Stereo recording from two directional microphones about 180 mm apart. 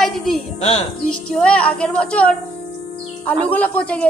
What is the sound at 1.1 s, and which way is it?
Music, 5° left (ahead or behind).